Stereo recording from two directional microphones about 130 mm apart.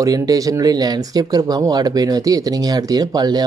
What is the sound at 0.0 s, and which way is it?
Speech, 30° right (ahead or behind).